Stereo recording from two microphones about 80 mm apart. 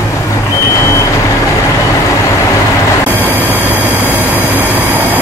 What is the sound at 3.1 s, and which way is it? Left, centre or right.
Vehicle, right.